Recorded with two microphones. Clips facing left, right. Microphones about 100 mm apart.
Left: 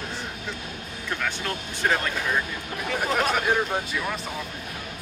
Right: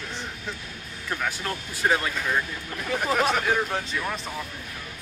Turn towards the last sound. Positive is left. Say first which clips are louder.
# left 1 dB
turn(degrees=15)  # may be behind; listen again after turning